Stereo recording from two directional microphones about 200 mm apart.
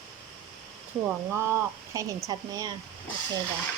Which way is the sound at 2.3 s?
20° right (ahead or behind).